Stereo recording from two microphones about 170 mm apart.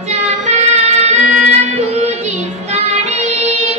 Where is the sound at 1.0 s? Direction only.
45° right (ahead or behind).